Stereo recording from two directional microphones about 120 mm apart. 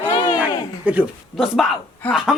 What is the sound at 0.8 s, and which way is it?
Speech, 15° right (ahead or behind).